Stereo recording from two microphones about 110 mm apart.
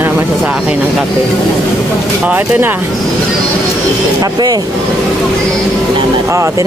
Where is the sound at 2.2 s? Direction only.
10° right (ahead or behind).